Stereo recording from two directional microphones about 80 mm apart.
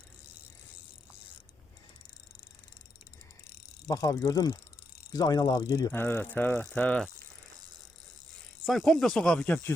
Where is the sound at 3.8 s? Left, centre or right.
Left.